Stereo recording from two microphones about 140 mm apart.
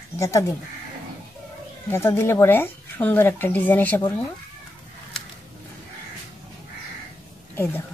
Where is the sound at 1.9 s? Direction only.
15° left (ahead or behind).